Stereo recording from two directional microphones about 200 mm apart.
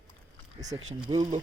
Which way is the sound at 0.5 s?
20° right (ahead or behind).